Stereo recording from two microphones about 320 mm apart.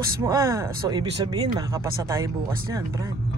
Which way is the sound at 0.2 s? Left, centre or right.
Centre.